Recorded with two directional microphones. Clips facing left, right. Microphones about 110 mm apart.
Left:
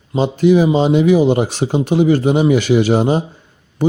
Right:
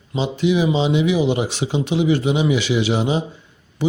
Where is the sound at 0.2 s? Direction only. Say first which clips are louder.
Left 6 dB; 45° left (ahead or behind).